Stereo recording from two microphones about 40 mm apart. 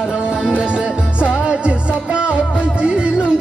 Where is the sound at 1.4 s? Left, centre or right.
Right.